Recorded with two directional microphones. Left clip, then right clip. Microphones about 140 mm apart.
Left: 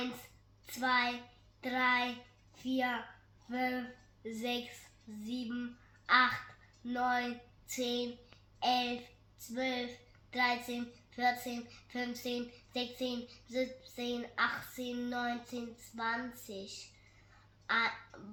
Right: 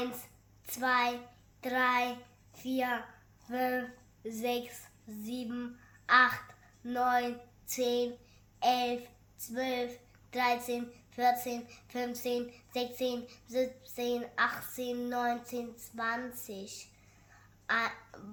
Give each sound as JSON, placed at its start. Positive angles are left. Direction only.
{"t": 0.6, "sound": "a child's voice", "side_deg": -35}
{"t": 1.6, "sound": "child singing", "side_deg": -35}
{"t": 8.5, "sound": "a child's voice", "side_deg": -35}
{"t": 9.5, "sound": "child singing", "side_deg": -35}
{"t": 17.7, "sound": "speech", "side_deg": -35}